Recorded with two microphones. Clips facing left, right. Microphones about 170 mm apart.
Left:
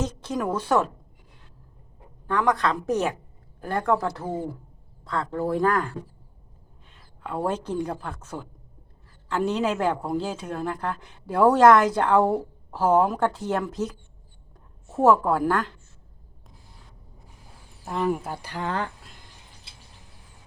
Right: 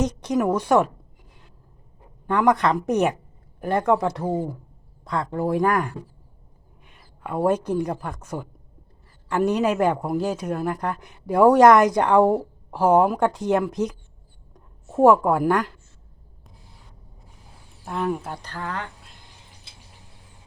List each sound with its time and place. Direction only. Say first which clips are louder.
0.0 s speech: right 6 dB; 15° right (ahead or behind)
2.2 s a woman's voice: right 4 dB; 20° right (ahead or behind)
17.8 s speech: even; centre (ahead or behind)